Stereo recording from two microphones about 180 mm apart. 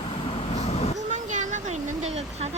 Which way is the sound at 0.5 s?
35° left (ahead or behind).